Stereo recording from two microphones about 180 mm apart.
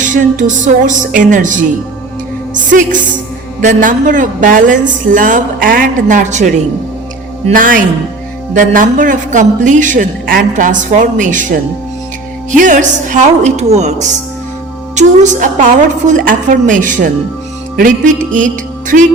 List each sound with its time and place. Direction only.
0.0 s a man's voice: 45° right (ahead or behind)
2.6 s a man's voice: 45° right (ahead or behind)
7.5 s a man's voice: 50° right (ahead or behind)
12.5 s a man's voice: 45° right (ahead or behind)